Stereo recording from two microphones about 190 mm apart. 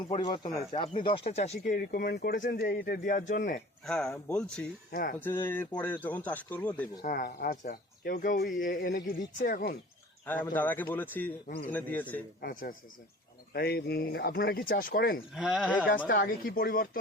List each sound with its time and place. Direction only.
0.1 s speech: 25° left (ahead or behind)
1.6 s speech: 50° left (ahead or behind)
3.8 s speech: 5° left (ahead or behind)
4.9 s speech: 50° left (ahead or behind)
5.2 s speech: 10° left (ahead or behind)
7.0 s speech: 50° left (ahead or behind)
10.2 s speech: 10° left (ahead or behind)
12.4 s speech: 50° left (ahead or behind)
15.4 s speech: 5° right (ahead or behind)
16.0 s speech: 50° left (ahead or behind)